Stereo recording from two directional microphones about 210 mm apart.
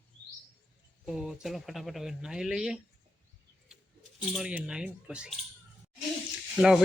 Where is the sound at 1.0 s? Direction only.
Centre (ahead or behind).